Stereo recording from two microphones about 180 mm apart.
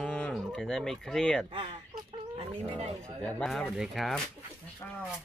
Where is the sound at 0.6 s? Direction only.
5° left (ahead or behind).